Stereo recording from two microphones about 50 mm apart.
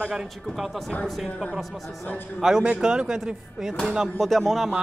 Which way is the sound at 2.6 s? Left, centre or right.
Centre.